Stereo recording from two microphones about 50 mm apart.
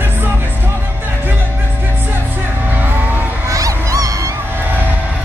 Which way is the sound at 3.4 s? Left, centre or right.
Right.